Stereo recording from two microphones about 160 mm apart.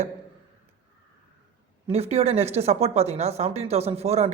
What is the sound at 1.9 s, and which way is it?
Speech, 40° right (ahead or behind).